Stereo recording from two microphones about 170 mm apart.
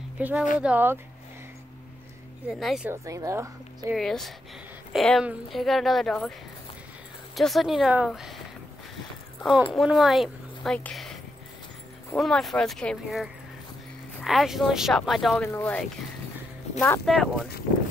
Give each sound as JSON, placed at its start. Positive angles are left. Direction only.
{"t": 0.2, "sound": "speech", "side_deg": -10}
{"t": 2.6, "sound": "a woman's voice", "side_deg": 0}
{"t": 2.9, "sound": "speech", "side_deg": -20}
{"t": 3.9, "sound": "a woman's voice", "side_deg": 0}
{"t": 7.3, "sound": "a woman's voice", "side_deg": 0}
{"t": 9.7, "sound": "a woman's voice", "side_deg": 0}
{"t": 12.2, "sound": "a woman's voice", "side_deg": 0}
{"t": 15.4, "sound": "speech", "side_deg": 10}
{"t": 16.8, "sound": "a woman's voice", "side_deg": 5}